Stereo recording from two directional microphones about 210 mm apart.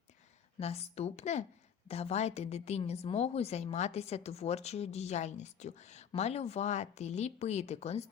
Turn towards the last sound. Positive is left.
turn(degrees=30)  # may be behind; listen again after turning